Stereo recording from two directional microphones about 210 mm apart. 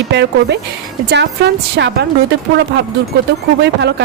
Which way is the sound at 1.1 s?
55° right (ahead or behind).